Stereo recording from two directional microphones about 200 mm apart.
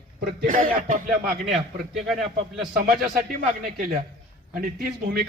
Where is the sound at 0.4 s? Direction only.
40° right (ahead or behind).